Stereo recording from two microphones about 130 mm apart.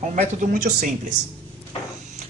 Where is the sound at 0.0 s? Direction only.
70° right (ahead or behind).